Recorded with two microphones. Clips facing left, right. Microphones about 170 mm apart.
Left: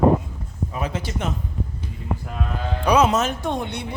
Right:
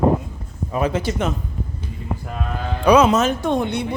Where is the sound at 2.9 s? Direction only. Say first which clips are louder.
Right 4 dB; 90° right.